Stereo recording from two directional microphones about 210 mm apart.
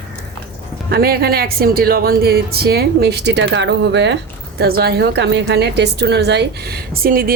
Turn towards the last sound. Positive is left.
turn(degrees=-45)  # may be behind; listen again after turning